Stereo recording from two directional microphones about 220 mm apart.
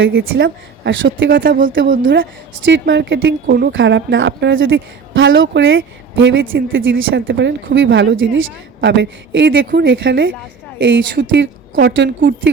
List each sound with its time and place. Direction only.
0.1 s a woman's voice: 45° right (ahead or behind)
1.5 s speech: 40° right (ahead or behind)
2.6 s a woman's voice: 55° right (ahead or behind)